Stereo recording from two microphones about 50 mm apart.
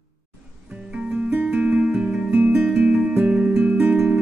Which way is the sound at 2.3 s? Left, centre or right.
Right.